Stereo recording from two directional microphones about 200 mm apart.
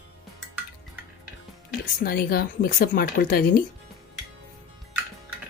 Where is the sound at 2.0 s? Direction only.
50° left (ahead or behind).